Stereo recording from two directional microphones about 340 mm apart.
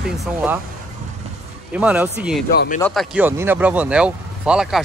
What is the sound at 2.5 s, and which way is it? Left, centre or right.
Speech, left.